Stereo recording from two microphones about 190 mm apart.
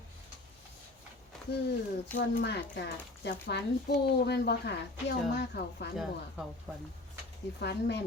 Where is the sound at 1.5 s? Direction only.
60° left (ahead or behind).